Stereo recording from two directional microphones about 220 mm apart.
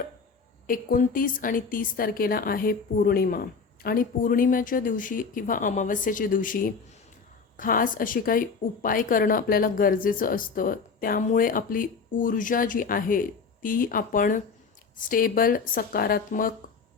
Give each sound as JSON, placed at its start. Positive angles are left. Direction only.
{"t": 0.7, "sound": "a woman's voice", "side_deg": 40}